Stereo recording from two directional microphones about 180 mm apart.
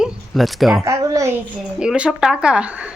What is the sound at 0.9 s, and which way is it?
Speech, 15° right (ahead or behind).